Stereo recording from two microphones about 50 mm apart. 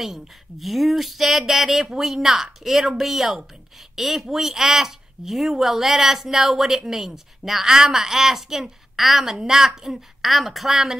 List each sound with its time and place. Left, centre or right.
0.0 s speech: centre